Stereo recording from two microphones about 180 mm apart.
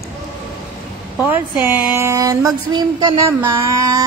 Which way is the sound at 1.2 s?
10° right (ahead or behind).